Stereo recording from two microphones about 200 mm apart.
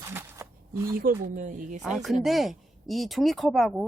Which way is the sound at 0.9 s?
40° right (ahead or behind).